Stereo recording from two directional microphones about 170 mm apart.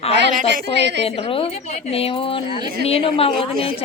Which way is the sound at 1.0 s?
35° left (ahead or behind).